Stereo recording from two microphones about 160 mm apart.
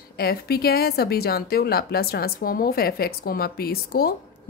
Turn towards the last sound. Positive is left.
turn(degrees=70)  # may be behind; listen again after turning